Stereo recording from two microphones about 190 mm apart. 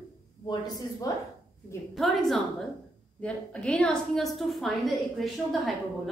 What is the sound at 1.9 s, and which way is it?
A woman's voice, centre (ahead or behind).